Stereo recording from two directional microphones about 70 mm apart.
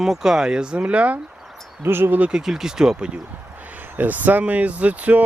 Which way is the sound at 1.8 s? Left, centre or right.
Right.